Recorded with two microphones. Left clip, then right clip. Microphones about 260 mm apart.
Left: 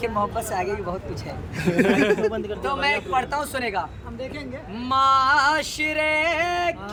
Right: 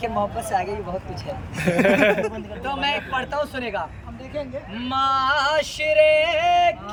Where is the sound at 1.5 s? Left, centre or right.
Centre.